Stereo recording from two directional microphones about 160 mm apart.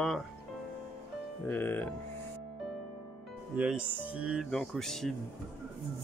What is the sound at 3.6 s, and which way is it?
Speech, 5° right (ahead or behind).